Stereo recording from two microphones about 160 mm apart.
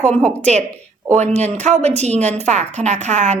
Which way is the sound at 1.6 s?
45° right (ahead or behind).